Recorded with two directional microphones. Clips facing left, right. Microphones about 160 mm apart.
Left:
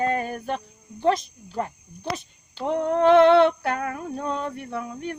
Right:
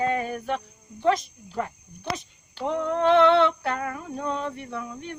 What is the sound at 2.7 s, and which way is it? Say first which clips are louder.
Female singing: left 3 dB; 45° left (ahead or behind).